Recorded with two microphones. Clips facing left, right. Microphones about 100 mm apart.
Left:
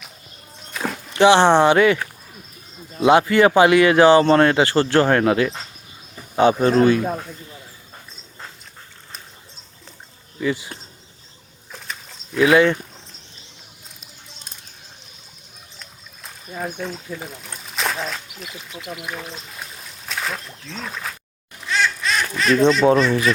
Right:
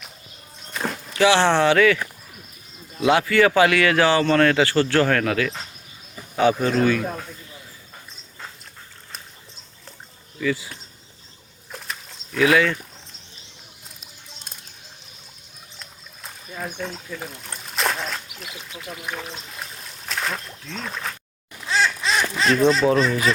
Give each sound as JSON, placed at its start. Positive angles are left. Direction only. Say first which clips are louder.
{"t": 0.7, "sound": "a sound", "louder": "left 1 dB", "side_deg": 0}
{"t": 1.1, "sound": "speech", "louder": "left 4 dB", "side_deg": 20}
{"t": 3.0, "sound": "speech", "louder": "left 4 dB", "side_deg": 25}
{"t": 6.8, "sound": "speech", "louder": "left 4 dB", "side_deg": 20}
{"t": 10.4, "sound": "speech", "louder": "left 1 dB", "side_deg": 20}
{"t": 11.7, "sound": "a sound", "louder": "even", "side_deg": 0}
{"t": 12.5, "sound": "speech", "louder": "left 5 dB", "side_deg": 20}
{"t": 16.5, "sound": "speech", "louder": "left 4 dB", "side_deg": 15}
{"t": 16.7, "sound": "speech", "louder": "left 2 dB", "side_deg": 5}
{"t": 21.7, "sound": "duck", "louder": "even", "side_deg": -25}
{"t": 22.8, "sound": "speech", "louder": "left 4 dB", "side_deg": 25}